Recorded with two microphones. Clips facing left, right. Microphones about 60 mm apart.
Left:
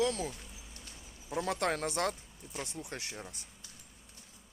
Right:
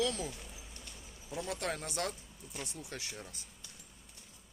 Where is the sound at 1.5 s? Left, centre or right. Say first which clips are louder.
Left 5 dB; left.